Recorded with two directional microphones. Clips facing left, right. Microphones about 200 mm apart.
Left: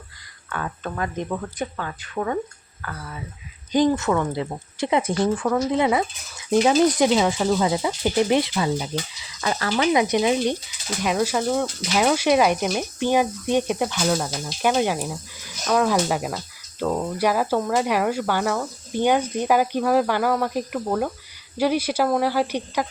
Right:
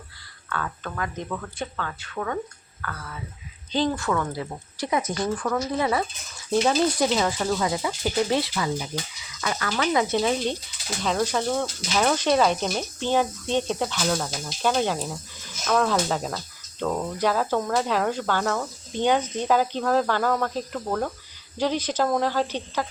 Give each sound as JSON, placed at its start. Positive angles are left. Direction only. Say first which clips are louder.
{"t": 0.5, "sound": "speech", "louder": "left 2 dB", "side_deg": 25}
{"t": 9.8, "sound": "speech", "louder": "left 3 dB", "side_deg": 15}